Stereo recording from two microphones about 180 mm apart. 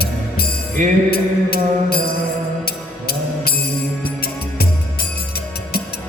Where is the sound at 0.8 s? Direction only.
45° right (ahead or behind).